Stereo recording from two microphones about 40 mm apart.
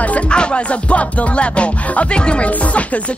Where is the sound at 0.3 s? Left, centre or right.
Left.